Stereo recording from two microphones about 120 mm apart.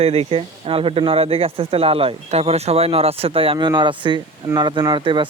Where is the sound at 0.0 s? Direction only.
55° right (ahead or behind).